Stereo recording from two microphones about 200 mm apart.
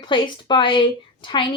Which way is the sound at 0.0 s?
25° left (ahead or behind).